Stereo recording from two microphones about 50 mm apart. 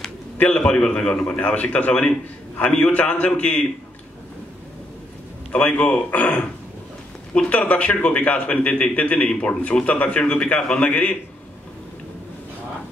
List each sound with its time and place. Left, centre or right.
0.4 s a man's voice: left
1.3 s a man's voice: left
5.5 s a man's voice: left